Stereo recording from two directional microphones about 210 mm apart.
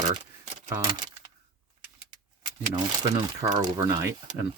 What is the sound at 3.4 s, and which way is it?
Speech, 20° right (ahead or behind).